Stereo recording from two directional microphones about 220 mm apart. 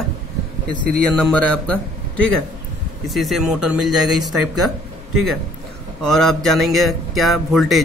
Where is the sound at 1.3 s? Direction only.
5° left (ahead or behind).